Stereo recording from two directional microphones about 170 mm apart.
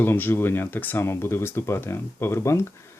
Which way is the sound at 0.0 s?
10° left (ahead or behind).